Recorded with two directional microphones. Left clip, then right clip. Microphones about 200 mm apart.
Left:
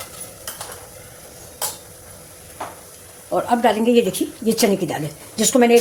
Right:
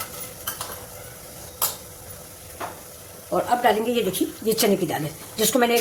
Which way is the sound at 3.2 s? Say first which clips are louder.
Left 2 dB; 30° left (ahead or behind).